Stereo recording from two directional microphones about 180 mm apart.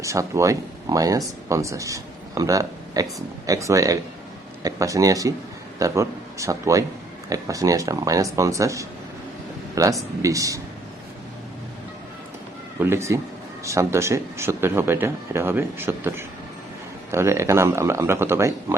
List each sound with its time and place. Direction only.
0.0 s speech: 15° right (ahead or behind)
12.8 s speech: 15° right (ahead or behind)